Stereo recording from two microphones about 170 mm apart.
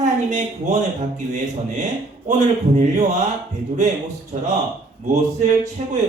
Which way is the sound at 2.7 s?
45° right (ahead or behind).